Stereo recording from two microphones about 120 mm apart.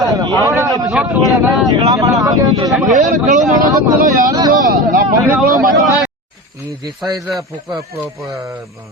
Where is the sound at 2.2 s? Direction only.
30° right (ahead or behind).